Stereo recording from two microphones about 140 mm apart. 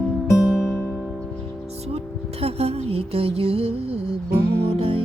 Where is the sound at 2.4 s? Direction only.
45° right (ahead or behind).